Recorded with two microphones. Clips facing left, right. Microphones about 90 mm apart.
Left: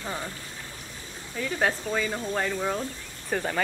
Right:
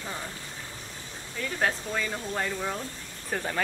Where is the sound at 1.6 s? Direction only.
5° left (ahead or behind).